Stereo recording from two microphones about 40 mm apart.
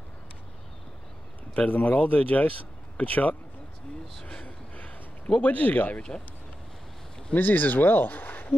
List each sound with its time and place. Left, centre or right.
1.5 s speech: left
4.2 s speech: left
4.5 s a sound: left
7.3 s speech: left